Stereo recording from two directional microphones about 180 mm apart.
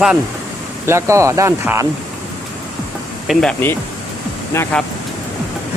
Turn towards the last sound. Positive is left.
turn(degrees=15)  # may be behind; listen again after turning